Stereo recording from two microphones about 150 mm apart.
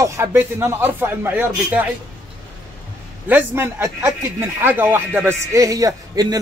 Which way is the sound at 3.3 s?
15° right (ahead or behind).